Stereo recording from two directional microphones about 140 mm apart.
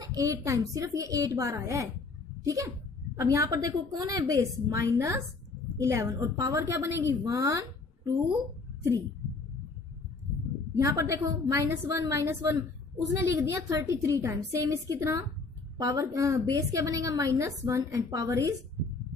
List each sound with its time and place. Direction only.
0.0 s a woman's voice: 25° right (ahead or behind)
10.8 s a woman's voice: 25° right (ahead or behind)